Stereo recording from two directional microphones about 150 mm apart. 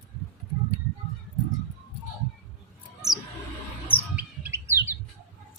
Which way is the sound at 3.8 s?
10° right (ahead or behind).